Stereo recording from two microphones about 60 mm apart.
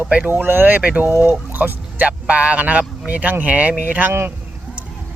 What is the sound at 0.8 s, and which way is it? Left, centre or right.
Speech, right.